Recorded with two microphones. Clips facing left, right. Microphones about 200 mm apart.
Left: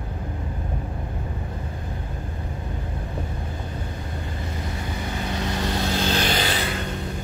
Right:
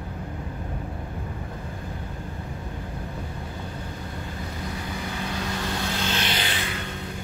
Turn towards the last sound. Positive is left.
turn(degrees=40)  # may be behind; listen again after turning